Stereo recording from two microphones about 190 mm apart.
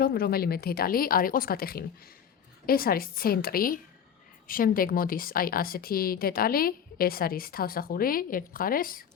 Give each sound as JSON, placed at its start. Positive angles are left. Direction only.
{"t": 0.0, "sound": "speech", "side_deg": 55}